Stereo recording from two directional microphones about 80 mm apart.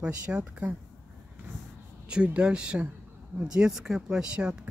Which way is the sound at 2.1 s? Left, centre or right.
Centre.